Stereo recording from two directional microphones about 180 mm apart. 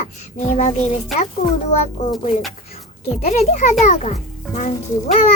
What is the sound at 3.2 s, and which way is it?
Speech, 40° left (ahead or behind).